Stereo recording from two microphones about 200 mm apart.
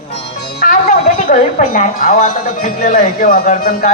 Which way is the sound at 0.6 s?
45° left (ahead or behind).